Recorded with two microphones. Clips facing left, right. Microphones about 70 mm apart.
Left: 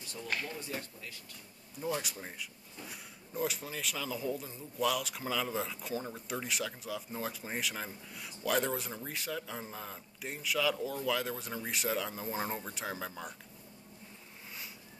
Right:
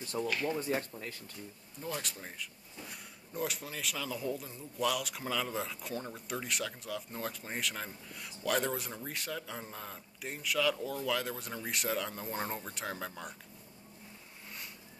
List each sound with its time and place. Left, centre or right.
0.1 s speech: right
0.6 s speech: right
1.8 s speech: centre